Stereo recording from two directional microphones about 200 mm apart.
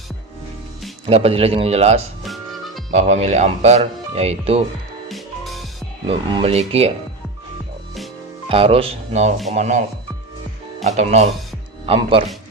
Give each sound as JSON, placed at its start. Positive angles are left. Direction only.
{"t": 1.0, "sound": "speech", "side_deg": -30}
{"t": 2.2, "sound": "music", "side_deg": 0}
{"t": 2.9, "sound": "speech", "side_deg": -35}
{"t": 5.0, "sound": "music", "side_deg": 0}
{"t": 6.1, "sound": "speech", "side_deg": -30}
{"t": 8.4, "sound": "speech", "side_deg": -30}
{"t": 10.9, "sound": "speech", "side_deg": -35}